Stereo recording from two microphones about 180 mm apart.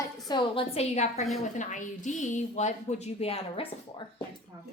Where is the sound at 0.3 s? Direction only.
25° left (ahead or behind).